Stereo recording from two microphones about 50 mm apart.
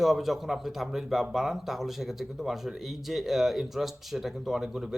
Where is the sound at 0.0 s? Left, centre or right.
Centre.